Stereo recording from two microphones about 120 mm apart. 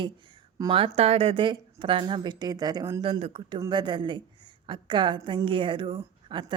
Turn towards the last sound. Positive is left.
turn(degrees=-45)  # may be behind; listen again after turning